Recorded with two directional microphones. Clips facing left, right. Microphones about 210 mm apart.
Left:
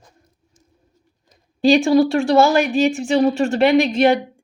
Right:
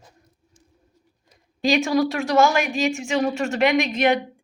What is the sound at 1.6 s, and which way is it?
A woman's voice, 30° left (ahead or behind).